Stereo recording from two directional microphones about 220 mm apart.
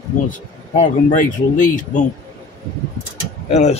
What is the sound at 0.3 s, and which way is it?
Speech, 35° left (ahead or behind).